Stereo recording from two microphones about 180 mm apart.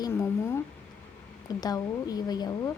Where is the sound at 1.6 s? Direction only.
20° left (ahead or behind).